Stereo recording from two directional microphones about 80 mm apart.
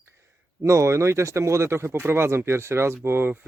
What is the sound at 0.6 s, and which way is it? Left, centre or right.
Speech, right.